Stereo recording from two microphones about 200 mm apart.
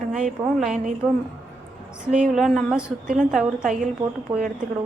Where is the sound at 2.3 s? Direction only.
Centre (ahead or behind).